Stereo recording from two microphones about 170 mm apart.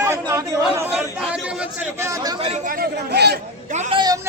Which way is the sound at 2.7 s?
65° right (ahead or behind).